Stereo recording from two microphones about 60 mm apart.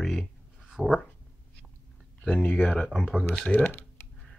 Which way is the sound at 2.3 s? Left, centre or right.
Left.